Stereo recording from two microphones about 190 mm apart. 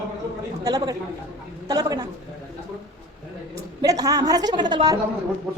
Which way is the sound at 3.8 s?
20° right (ahead or behind).